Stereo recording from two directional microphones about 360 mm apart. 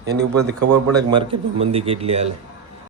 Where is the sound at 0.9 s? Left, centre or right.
Centre.